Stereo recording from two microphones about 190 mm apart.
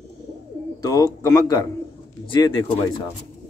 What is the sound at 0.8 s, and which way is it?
A man's voice, 20° left (ahead or behind).